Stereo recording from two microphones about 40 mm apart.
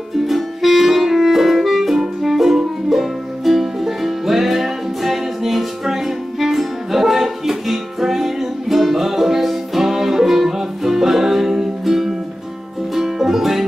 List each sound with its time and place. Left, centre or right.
0.3 s music: centre